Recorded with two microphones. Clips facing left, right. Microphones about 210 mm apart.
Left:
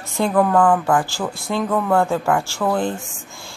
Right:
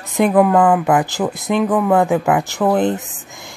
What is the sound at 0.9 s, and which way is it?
Speech, 20° right (ahead or behind).